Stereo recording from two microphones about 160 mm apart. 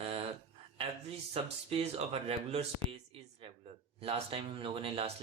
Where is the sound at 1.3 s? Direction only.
40° right (ahead or behind).